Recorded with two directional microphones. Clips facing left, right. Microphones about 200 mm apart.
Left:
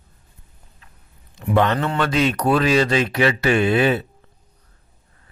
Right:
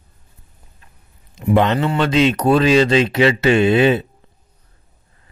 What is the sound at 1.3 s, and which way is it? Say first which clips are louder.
Speech: right 3 dB; 20° right (ahead or behind).